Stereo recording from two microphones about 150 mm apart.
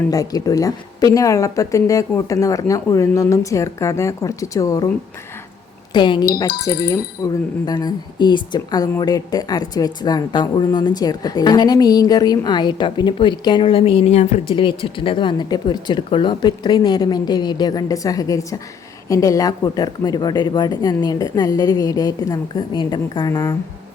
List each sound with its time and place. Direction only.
0.1 s speech: 25° left (ahead or behind)
5.9 s speech: 30° left (ahead or behind)
6.5 s speech: 90° left
6.8 s speech: 25° left (ahead or behind); by 14.4 s 50° left (ahead or behind)
14.4 s speech: 35° left (ahead or behind)